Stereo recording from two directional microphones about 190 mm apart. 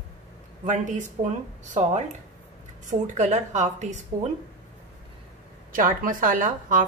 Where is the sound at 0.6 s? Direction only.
40° right (ahead or behind).